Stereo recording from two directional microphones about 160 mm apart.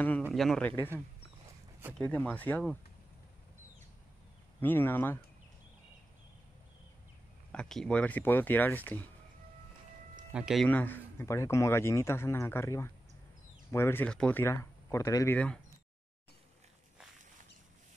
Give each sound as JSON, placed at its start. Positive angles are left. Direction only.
{"t": 0.3, "sound": "speech", "side_deg": 0}
{"t": 2.0, "sound": "speech", "side_deg": 10}
{"t": 4.6, "sound": "speech", "side_deg": 10}
{"t": 7.5, "sound": "speech", "side_deg": 5}
{"t": 10.3, "sound": "speech", "side_deg": 0}
{"t": 10.7, "sound": "speech", "side_deg": 10}
{"t": 15.3, "sound": "speech", "side_deg": 5}